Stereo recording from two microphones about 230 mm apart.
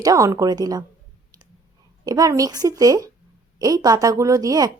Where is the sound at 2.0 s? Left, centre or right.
Centre.